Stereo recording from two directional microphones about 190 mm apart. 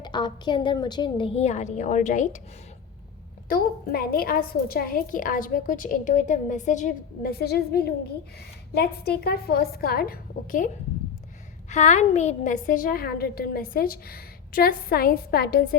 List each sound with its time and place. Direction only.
0.0 s a woman's voice: 25° left (ahead or behind); by 2.4 s 40° left (ahead or behind)
3.5 s a woman's voice: 50° left (ahead or behind)
11.7 s a woman's voice: 40° left (ahead or behind)